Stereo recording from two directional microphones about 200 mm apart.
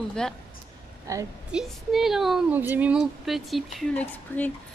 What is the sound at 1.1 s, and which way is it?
Speech, 15° right (ahead or behind).